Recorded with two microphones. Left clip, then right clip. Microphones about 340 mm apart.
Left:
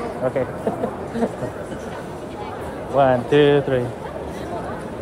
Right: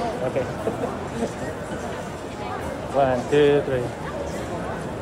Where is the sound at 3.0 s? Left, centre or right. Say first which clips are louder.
Left 4 dB; left.